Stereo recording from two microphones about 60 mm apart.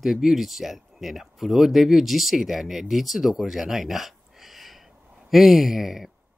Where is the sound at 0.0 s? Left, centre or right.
Centre.